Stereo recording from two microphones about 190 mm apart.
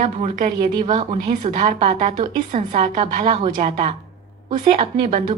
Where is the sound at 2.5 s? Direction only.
45° right (ahead or behind).